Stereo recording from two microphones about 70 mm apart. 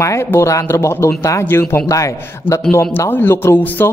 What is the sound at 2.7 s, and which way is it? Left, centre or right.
Speech, left.